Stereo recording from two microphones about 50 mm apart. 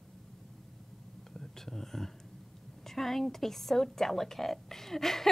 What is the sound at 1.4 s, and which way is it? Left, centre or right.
Whispering, centre.